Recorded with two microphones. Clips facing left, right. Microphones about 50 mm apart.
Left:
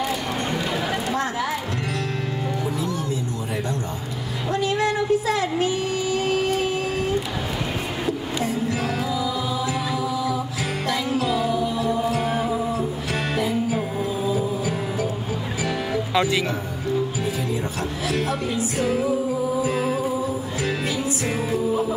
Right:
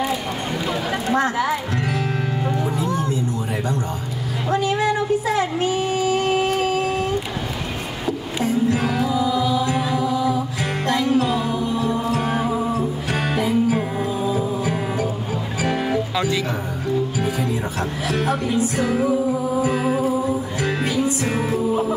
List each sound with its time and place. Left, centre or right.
1.1 s speech: centre
4.5 s a sound: right
9.1 s music: right
12.0 s music: centre
12.4 s music: centre
18.0 s music: centre
20.6 s music: centre
21.5 s music: centre